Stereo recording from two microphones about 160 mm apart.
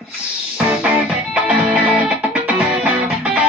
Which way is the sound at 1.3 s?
5° right (ahead or behind).